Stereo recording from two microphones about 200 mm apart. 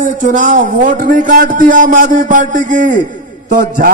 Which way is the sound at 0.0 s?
40° right (ahead or behind).